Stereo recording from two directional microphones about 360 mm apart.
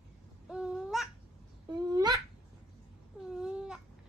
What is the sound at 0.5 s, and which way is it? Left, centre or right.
Babbling, centre.